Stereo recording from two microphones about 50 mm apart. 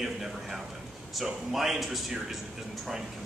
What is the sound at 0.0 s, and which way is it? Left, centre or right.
A man's voice, centre.